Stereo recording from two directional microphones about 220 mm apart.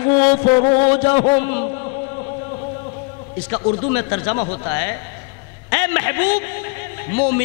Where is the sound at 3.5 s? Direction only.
20° left (ahead or behind).